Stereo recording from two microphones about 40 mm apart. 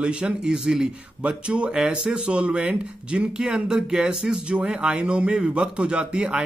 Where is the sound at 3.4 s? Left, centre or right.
Centre.